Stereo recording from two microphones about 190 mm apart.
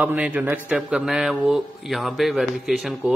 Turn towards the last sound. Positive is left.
turn(degrees=0)  # may be behind; listen again after turning